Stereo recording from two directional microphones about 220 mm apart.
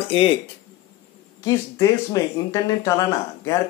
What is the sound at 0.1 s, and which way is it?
Speech, 25° left (ahead or behind).